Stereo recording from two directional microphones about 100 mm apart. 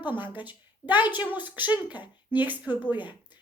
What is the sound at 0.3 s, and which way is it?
A woman's voice, 15° right (ahead or behind).